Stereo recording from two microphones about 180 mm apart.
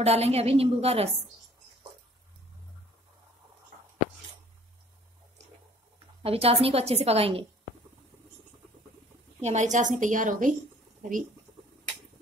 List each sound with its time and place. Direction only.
0.0 s a woman's voice: 35° right (ahead or behind)
6.2 s a woman's voice: 35° right (ahead or behind)
9.4 s a woman's voice: 40° right (ahead or behind)